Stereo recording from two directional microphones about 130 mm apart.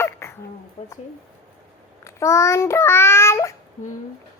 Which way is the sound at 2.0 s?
20° left (ahead or behind).